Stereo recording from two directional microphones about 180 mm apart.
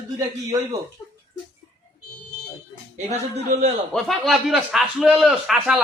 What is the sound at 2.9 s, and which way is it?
Speech, 35° right (ahead or behind).